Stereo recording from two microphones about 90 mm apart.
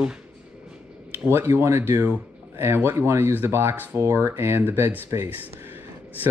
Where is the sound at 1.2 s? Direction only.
25° right (ahead or behind).